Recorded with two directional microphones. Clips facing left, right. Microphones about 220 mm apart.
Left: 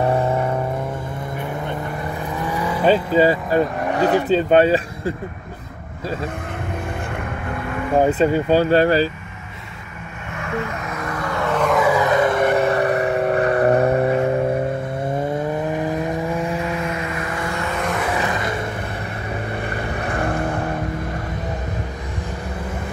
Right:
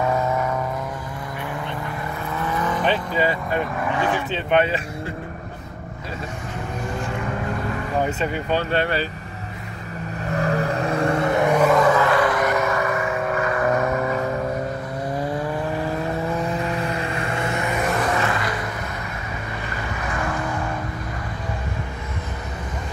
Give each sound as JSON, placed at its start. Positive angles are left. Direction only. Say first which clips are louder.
{"t": 0.0, "sound": "vehicle", "louder": "left 3 dB", "side_deg": 30}
{"t": 2.3, "sound": "vehicle", "louder": "even", "side_deg": 15}
{"t": 2.9, "sound": "speech", "louder": "left 11 dB", "side_deg": 35}
{"t": 8.0, "sound": "speech", "louder": "left 9 dB", "side_deg": 35}
{"t": 10.3, "sound": "vehicle", "louder": "right 4 dB", "side_deg": -35}
{"t": 11.7, "sound": "vehicle", "louder": "even", "side_deg": 10}
{"t": 15.7, "sound": "vehicle", "louder": "left 3 dB", "side_deg": 20}
{"t": 16.6, "sound": "music", "louder": "left 1 dB", "side_deg": -35}
{"t": 18.1, "sound": "vehicle", "louder": "left 1 dB", "side_deg": 15}